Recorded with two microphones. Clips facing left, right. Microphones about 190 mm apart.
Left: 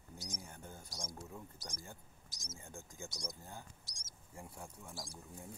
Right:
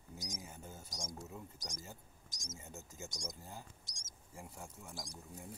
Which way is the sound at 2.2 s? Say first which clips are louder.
Right 2 dB; 45° right (ahead or behind).